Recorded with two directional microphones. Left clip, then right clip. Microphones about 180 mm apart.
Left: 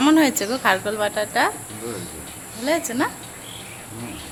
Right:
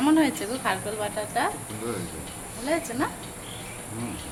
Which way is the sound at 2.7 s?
50° left (ahead or behind).